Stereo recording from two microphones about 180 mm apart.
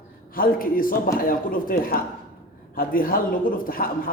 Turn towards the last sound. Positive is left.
turn(degrees=50)  # may be behind; listen again after turning